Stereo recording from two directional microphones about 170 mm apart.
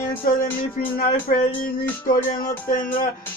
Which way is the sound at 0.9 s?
55° left (ahead or behind).